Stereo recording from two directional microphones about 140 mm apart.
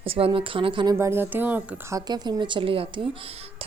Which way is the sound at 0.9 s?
15° right (ahead or behind).